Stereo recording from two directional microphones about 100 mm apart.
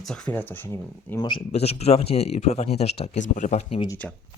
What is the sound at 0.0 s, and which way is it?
Speech, 10° left (ahead or behind).